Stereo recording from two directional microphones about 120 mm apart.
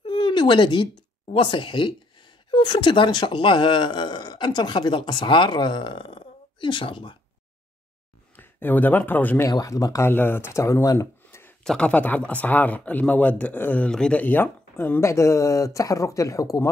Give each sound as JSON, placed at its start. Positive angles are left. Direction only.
{"t": 0.0, "sound": "a sound", "side_deg": 40}
{"t": 1.2, "sound": "speech", "side_deg": 45}
{"t": 8.4, "sound": "speech", "side_deg": 15}
{"t": 9.5, "sound": "speech", "side_deg": 30}
{"t": 10.0, "sound": "speech", "side_deg": 20}
{"t": 11.6, "sound": "speech", "side_deg": 10}